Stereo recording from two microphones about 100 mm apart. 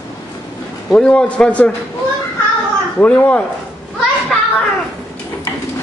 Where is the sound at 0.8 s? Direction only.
10° left (ahead or behind).